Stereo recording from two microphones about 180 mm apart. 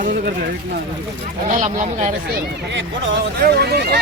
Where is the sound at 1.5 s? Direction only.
40° right (ahead or behind).